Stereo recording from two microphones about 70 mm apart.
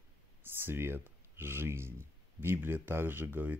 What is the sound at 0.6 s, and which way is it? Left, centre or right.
Speech, right.